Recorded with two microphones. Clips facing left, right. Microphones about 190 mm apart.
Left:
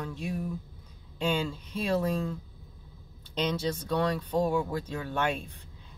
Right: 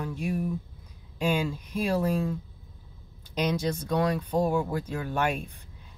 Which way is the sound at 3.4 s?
10° right (ahead or behind).